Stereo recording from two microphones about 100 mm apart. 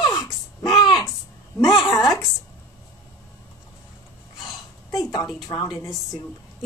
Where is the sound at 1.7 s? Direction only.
Centre (ahead or behind).